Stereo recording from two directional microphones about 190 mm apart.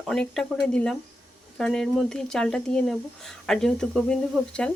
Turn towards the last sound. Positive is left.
turn(degrees=5)  # may be behind; listen again after turning